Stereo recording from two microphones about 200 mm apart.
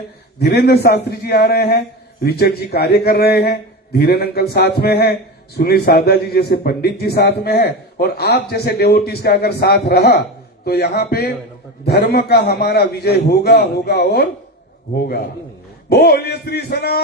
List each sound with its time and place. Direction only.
0.3 s a man's voice: 55° left (ahead or behind)